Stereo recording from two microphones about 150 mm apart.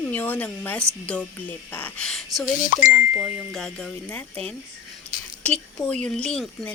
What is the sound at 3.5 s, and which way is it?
A woman's voice, 5° left (ahead or behind).